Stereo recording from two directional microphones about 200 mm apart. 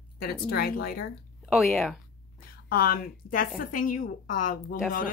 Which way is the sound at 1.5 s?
Centre (ahead or behind).